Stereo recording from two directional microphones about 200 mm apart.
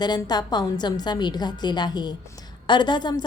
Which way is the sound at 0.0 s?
20° left (ahead or behind).